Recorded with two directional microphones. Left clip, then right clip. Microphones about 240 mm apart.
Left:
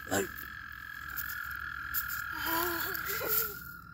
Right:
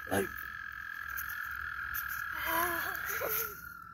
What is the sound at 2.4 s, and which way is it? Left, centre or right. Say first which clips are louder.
Frog: right 1 dB; left.